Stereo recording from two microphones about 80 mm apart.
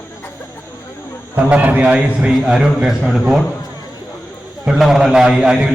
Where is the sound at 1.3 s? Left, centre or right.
Right.